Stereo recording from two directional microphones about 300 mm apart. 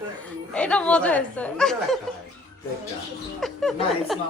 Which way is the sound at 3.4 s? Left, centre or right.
Centre.